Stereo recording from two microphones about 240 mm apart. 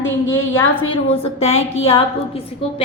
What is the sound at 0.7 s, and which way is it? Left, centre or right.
Speech, left.